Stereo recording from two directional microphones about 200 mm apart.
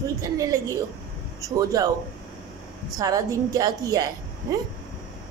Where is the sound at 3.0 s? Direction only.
20° right (ahead or behind).